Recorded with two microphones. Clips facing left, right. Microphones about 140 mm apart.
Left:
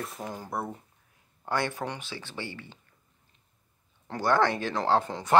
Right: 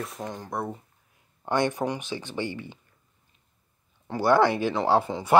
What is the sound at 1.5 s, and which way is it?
Speech, 20° right (ahead or behind).